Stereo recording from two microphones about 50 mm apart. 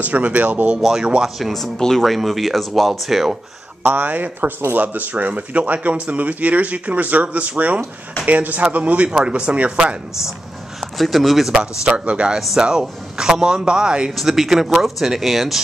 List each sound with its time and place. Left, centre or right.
0.0 s speech: right
0.7 s speech: centre
1.4 s speech: centre
3.8 s speech: right
11.0 s speech: centre
11.9 s speech: right
14.1 s speech: centre